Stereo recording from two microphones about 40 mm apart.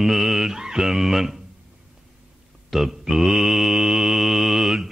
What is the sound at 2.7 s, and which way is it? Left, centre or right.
Mantra, centre.